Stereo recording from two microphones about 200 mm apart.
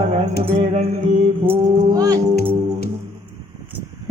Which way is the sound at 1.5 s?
15° right (ahead or behind).